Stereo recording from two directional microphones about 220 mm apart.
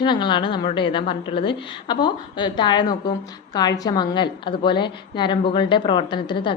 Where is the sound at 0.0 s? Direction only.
20° left (ahead or behind).